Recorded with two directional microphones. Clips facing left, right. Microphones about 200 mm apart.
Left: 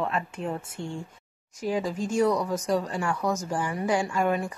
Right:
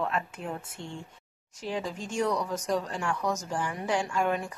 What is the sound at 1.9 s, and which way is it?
Speech, 40° left (ahead or behind).